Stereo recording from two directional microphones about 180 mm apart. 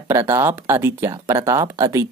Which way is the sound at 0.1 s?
15° right (ahead or behind).